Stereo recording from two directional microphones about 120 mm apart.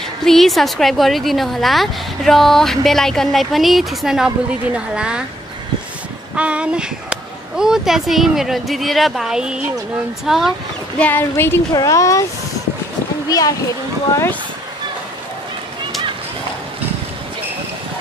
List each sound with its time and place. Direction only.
0.2 s a woman's voice: 5° left (ahead or behind)
6.3 s a woman's voice: 10° right (ahead or behind)
11.0 s speech: 15° left (ahead or behind)
11.7 s speech: 30° left (ahead or behind)
13.3 s speech: 30° left (ahead or behind)